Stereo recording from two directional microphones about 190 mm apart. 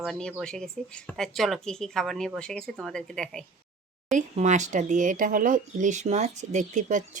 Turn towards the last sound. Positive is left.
turn(degrees=-40)  # may be behind; listen again after turning